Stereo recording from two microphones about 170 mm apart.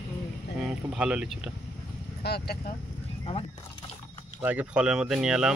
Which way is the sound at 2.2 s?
70° left (ahead or behind).